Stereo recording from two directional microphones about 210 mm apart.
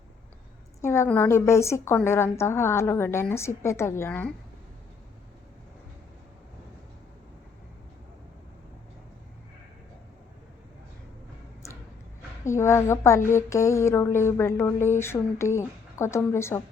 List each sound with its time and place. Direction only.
0.8 s a woman's voice: 10° left (ahead or behind)
12.5 s a woman's voice: 15° left (ahead or behind)